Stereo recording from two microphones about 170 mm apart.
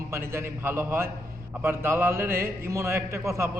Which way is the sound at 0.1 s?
15° right (ahead or behind).